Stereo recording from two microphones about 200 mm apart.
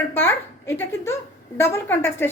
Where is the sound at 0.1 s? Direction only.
10° left (ahead or behind).